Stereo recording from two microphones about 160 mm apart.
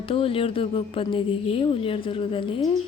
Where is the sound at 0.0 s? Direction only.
35° left (ahead or behind).